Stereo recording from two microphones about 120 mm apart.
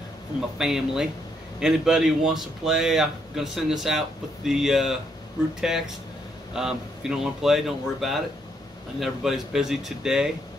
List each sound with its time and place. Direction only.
0.6 s speech: 5° right (ahead or behind)